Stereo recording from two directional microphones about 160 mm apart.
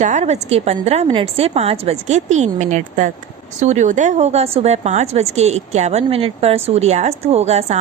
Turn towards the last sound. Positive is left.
turn(degrees=-45)  # may be behind; listen again after turning